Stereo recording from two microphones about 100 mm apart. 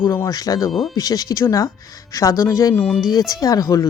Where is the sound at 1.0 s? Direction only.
40° left (ahead or behind).